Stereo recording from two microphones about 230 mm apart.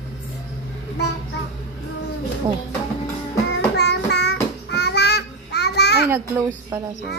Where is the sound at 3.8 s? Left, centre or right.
Left.